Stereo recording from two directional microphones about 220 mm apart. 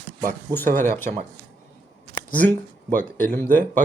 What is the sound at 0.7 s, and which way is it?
Speech, 35° right (ahead or behind).